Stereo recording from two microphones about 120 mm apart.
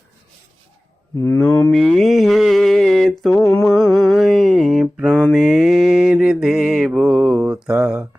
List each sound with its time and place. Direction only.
1.1 s mantra: 25° left (ahead or behind)
1.4 s mantra: 10° left (ahead or behind)
3.3 s a sound: 15° left (ahead or behind)
3.6 s mantra: centre (ahead or behind)